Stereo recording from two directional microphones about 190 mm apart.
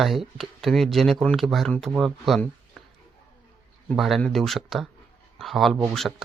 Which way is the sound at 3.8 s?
Centre (ahead or behind).